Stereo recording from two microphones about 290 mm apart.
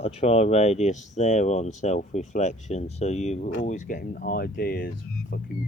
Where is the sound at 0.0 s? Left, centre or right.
Left.